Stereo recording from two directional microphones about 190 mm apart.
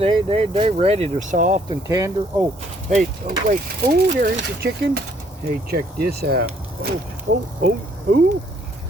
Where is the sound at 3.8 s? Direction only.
55° right (ahead or behind).